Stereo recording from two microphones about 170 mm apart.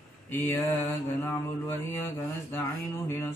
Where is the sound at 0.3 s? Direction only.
10° left (ahead or behind).